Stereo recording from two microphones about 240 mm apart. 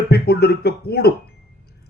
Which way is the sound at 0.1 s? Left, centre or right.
Left.